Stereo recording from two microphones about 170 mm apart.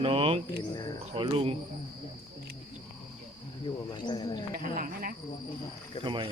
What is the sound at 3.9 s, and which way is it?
Speech, 25° left (ahead or behind).